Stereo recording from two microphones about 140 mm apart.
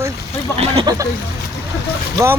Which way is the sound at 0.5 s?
45° right (ahead or behind).